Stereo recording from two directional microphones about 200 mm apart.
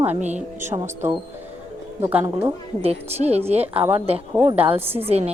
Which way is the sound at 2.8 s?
30° right (ahead or behind).